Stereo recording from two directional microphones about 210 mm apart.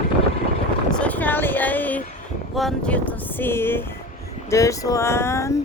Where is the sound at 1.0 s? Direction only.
5° left (ahead or behind).